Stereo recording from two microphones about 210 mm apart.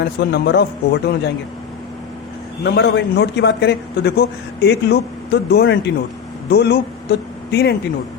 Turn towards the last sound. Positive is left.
turn(degrees=50)  # may be behind; listen again after turning